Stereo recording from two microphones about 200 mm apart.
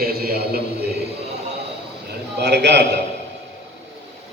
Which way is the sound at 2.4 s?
55° right (ahead or behind).